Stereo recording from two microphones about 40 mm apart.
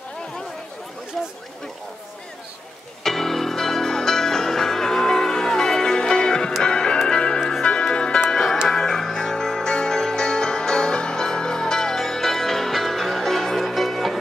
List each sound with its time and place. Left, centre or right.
3.0 s music: centre